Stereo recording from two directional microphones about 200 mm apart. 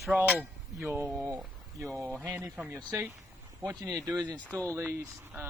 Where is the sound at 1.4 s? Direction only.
Centre (ahead or behind); by 4.1 s 15° right (ahead or behind).